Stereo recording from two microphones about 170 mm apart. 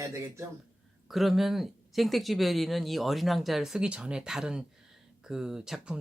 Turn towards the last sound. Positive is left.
turn(degrees=-5)  # may be behind; listen again after turning